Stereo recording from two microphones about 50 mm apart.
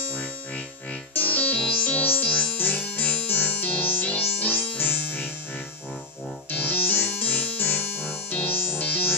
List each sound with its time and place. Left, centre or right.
1.1 s music: left
6.5 s music: left